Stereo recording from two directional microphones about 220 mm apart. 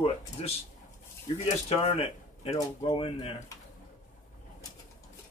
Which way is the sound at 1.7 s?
30° left (ahead or behind).